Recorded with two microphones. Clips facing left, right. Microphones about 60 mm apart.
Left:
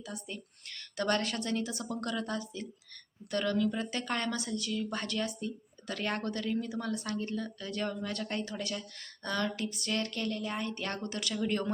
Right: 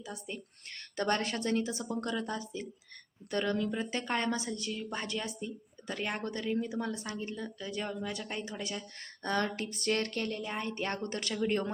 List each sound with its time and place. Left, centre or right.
0.0 s a woman's voice: right
9.0 s speech: right
10.4 s a woman's voice: right